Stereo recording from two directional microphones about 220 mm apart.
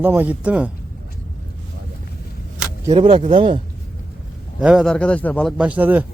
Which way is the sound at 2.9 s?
25° right (ahead or behind).